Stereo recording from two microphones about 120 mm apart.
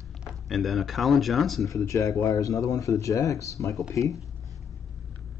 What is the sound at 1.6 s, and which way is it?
Speech, 25° left (ahead or behind).